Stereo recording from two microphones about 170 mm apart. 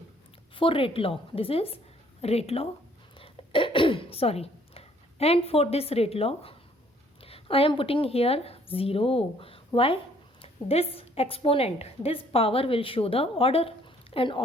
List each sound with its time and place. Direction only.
0.5 s a woman's voice: 30° left (ahead or behind)
3.2 s throat clearing: 30° left (ahead or behind)
7.2 s a woman's voice: 35° left (ahead or behind)